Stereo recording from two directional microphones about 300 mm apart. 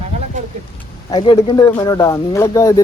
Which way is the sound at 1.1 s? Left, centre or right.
Centre.